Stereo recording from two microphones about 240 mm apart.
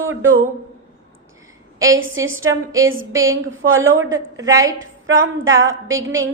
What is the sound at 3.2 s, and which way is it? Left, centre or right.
Speech, right.